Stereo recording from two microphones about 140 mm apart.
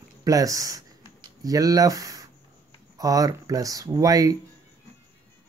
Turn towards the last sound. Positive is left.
turn(degrees=-25)  # may be behind; listen again after turning